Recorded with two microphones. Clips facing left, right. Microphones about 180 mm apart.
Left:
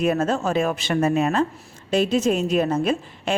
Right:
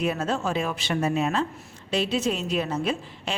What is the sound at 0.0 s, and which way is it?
A woman's voice, 50° left (ahead or behind).